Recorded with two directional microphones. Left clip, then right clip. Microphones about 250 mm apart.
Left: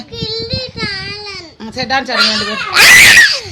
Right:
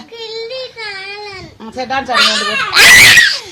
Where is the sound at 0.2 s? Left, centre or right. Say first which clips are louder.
Left 3 dB; left.